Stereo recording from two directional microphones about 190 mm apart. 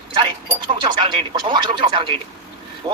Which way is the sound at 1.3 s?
25° right (ahead or behind).